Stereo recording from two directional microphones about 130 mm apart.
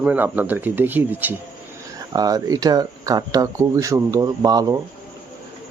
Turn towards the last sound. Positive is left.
turn(degrees=-30)  # may be behind; listen again after turning